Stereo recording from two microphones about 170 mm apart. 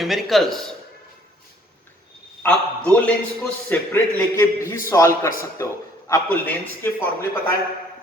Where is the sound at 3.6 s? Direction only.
15° left (ahead or behind).